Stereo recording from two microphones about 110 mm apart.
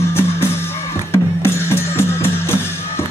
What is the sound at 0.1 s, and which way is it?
Music, 20° left (ahead or behind).